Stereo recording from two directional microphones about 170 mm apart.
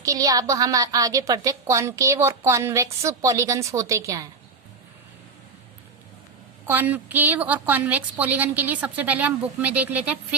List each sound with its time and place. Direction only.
0.0 s a woman's voice: 20° right (ahead or behind)
6.7 s a woman's voice: 10° right (ahead or behind)